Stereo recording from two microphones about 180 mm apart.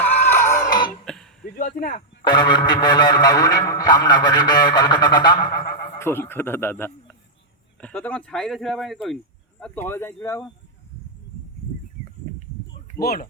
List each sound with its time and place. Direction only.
0.0 s a sound: 10° left (ahead or behind)
1.0 s throat clearing: 5° left (ahead or behind)
1.5 s a sound: 50° left (ahead or behind)
2.0 s speech: 25° left (ahead or behind)
6.0 s speech: 15° left (ahead or behind)
13.0 s speech: 55° left (ahead or behind)